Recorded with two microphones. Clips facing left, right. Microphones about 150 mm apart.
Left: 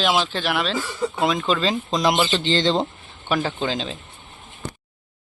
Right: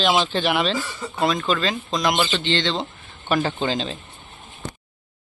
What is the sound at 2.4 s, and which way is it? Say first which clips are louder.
Speech: left 3 dB; 40° left (ahead or behind).